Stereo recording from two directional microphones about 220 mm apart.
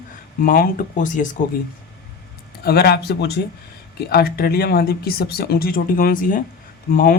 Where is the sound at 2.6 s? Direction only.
45° left (ahead or behind).